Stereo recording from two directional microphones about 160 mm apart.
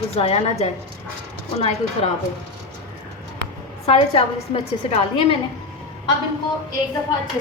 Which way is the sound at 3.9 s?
40° left (ahead or behind).